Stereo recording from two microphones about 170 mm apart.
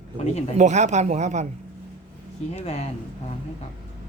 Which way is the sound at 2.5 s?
40° left (ahead or behind).